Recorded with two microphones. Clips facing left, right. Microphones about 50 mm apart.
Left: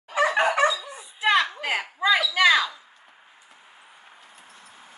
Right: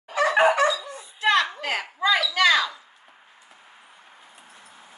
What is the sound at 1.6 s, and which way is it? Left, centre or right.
Speech, centre.